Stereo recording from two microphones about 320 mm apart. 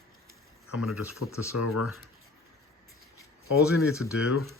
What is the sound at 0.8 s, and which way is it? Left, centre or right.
Speech, left.